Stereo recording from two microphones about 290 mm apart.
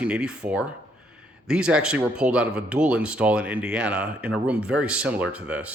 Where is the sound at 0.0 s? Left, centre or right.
Centre.